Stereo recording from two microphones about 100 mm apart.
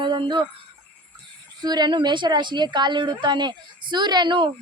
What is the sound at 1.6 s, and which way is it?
A woman's voice, 45° right (ahead or behind).